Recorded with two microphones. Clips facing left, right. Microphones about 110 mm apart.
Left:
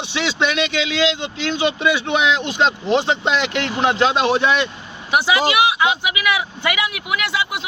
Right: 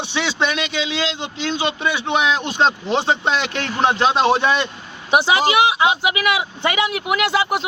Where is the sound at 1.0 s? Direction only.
35° right (ahead or behind).